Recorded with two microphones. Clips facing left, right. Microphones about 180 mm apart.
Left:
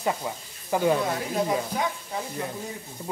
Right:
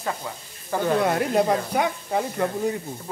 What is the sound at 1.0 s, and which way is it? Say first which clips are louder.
Speech: right 6 dB; 65° right (ahead or behind).